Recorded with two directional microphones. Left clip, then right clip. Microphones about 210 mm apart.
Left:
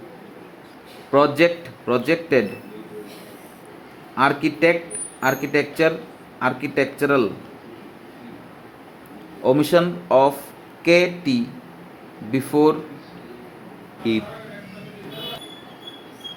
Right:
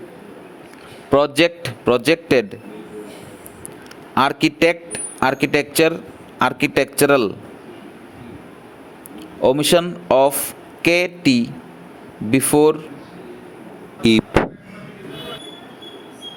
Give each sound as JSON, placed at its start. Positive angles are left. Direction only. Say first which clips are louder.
{"t": 1.1, "sound": "a man's voice", "louder": "right 1 dB", "side_deg": -45}
{"t": 4.1, "sound": "a man's voice", "louder": "right 2 dB", "side_deg": -50}
{"t": 9.4, "sound": "speech", "louder": "right 2 dB", "side_deg": -40}